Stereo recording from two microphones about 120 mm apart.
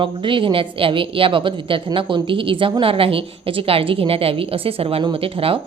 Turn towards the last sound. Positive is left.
turn(degrees=-50)  # may be behind; listen again after turning